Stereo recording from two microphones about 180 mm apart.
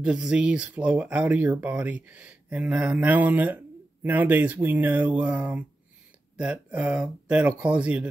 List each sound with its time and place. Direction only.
0.0 s speech: 5° right (ahead or behind)